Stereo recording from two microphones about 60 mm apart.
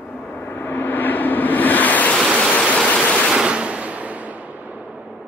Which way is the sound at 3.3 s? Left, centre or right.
Centre.